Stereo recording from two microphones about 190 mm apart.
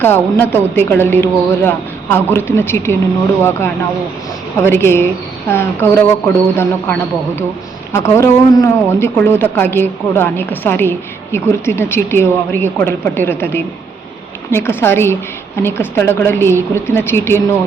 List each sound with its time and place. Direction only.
0.0 s speech: 10° left (ahead or behind)
4.6 s speech: 15° left (ahead or behind)